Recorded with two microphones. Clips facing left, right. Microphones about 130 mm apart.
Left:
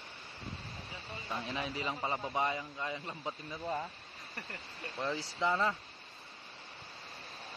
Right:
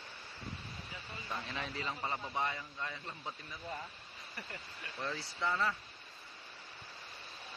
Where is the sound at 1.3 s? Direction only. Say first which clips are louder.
Left 4 dB; 15° left (ahead or behind).